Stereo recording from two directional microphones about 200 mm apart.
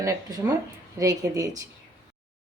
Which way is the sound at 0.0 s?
20° right (ahead or behind).